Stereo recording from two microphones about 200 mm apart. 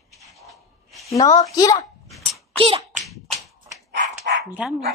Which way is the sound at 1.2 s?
20° left (ahead or behind).